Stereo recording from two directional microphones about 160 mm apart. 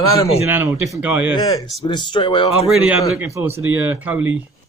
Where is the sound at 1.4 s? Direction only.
20° left (ahead or behind).